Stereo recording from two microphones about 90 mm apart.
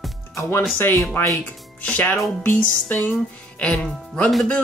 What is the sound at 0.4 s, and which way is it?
Speech, 30° left (ahead or behind).